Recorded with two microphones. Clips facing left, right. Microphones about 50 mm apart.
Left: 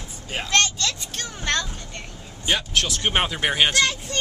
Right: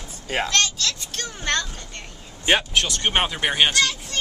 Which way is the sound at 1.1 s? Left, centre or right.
Centre.